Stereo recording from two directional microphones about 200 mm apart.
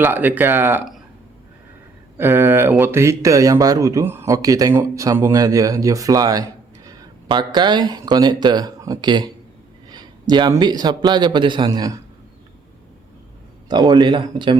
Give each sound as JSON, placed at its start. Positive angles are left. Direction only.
{"t": 0.0, "sound": "a man's voice", "side_deg": -10}
{"t": 2.1, "sound": "a man's voice", "side_deg": -10}
{"t": 13.7, "sound": "a man's voice", "side_deg": -20}